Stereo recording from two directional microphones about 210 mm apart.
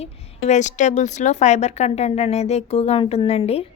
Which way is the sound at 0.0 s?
35° left (ahead or behind).